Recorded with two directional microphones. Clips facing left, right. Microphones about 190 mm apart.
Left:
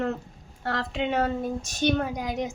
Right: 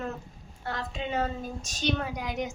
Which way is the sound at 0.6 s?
85° left.